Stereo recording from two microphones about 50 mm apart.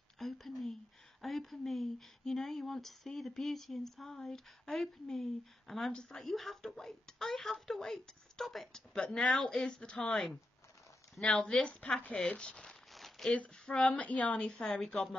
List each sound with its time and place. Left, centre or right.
0.2 s speech: centre
8.7 s speech: centre
11.2 s speech: centre
11.8 s a sound: left
12.6 s crumpling: centre
13.3 s a sound: centre
14.4 s speech: centre